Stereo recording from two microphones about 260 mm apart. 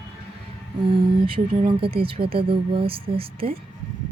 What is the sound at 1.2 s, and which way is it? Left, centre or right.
Speech, centre.